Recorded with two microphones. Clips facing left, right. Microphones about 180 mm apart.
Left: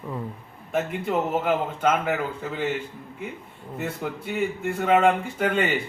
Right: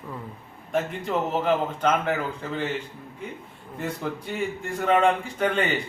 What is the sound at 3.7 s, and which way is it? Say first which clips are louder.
A man's voice: even; 5° left (ahead or behind).